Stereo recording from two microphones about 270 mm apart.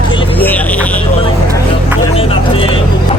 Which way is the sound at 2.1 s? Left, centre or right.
Centre.